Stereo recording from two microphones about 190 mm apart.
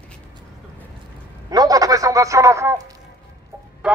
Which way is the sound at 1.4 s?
20° right (ahead or behind).